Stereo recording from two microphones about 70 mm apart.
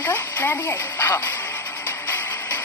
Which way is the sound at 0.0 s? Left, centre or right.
Left.